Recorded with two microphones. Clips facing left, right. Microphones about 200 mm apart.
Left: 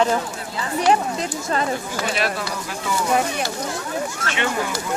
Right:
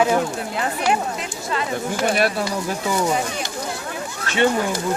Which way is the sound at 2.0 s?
50° right (ahead or behind).